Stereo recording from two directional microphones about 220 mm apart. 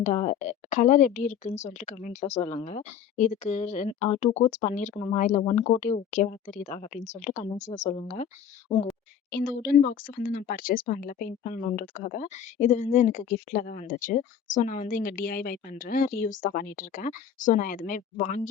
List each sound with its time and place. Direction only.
0.0 s speech: 30° left (ahead or behind)
9.3 s speech: 45° left (ahead or behind)